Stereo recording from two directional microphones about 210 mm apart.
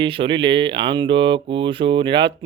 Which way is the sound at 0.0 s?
25° right (ahead or behind).